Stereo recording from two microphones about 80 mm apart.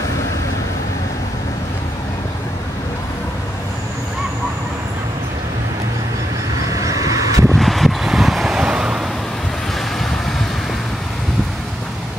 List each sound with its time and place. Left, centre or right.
6.7 s vehicle: right
7.5 s vehicle: centre